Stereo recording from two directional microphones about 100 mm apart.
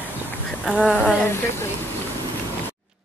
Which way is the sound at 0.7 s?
5° left (ahead or behind).